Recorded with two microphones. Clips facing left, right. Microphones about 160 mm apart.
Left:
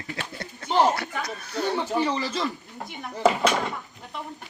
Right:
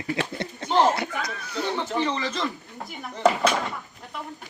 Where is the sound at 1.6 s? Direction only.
10° left (ahead or behind).